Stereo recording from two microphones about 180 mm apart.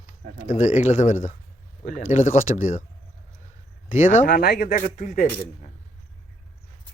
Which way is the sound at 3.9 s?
45° left (ahead or behind).